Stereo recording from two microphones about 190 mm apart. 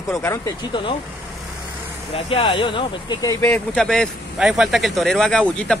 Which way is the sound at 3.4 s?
5° left (ahead or behind).